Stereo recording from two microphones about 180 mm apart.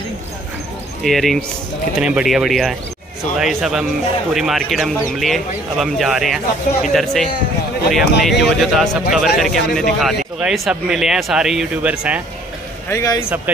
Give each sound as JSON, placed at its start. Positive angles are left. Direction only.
{"t": 1.0, "sound": "a man's voice", "side_deg": 0}
{"t": 12.9, "sound": "a man's voice", "side_deg": 15}